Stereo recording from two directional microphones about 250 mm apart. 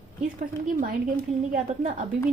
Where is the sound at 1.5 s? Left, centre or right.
Right.